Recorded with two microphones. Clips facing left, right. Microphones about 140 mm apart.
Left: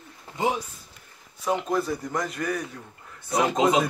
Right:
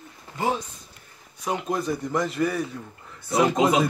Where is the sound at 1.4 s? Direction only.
Centre (ahead or behind).